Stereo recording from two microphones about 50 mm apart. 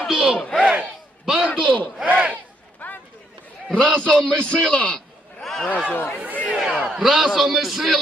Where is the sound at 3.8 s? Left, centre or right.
Centre.